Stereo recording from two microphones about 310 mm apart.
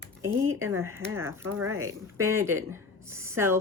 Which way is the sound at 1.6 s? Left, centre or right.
Right.